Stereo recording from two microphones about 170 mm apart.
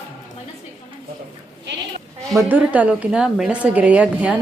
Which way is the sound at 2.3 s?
10° right (ahead or behind).